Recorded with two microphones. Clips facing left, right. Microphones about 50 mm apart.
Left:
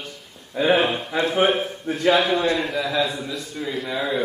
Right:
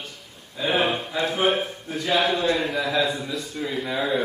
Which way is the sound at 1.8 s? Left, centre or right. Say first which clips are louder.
Left 9 dB; left.